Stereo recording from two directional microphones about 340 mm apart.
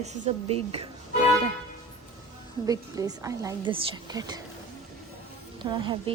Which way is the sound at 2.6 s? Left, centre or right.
Centre.